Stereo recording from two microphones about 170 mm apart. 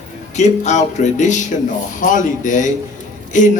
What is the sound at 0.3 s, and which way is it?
A man's voice, 45° left (ahead or behind).